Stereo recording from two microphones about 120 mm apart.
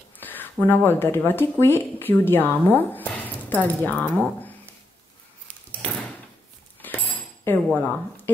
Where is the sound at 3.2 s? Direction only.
15° left (ahead or behind).